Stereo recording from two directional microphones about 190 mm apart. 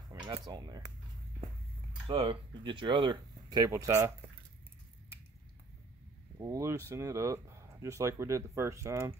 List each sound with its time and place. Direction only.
0.1 s speech: 20° right (ahead or behind)
2.0 s speech: 25° right (ahead or behind)
6.3 s speech: 15° right (ahead or behind)